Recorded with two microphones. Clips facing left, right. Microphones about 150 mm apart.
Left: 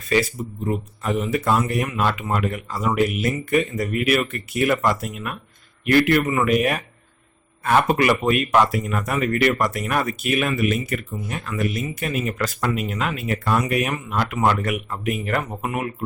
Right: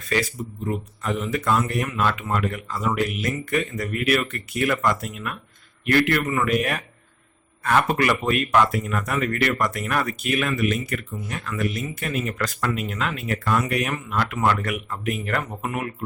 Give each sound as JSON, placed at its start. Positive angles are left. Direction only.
{"t": 0.7, "sound": "speech", "side_deg": 15}